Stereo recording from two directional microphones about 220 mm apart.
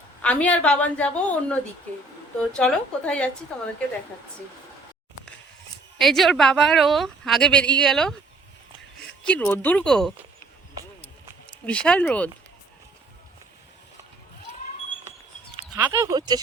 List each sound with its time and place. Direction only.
0.2 s a woman's voice: 5° left (ahead or behind)
2.6 s a woman's voice: 5° left (ahead or behind)
6.0 s a woman's voice: centre (ahead or behind)
9.2 s speech: 5° left (ahead or behind)
11.6 s a woman's voice: 5° left (ahead or behind)
15.7 s speech: 15° right (ahead or behind)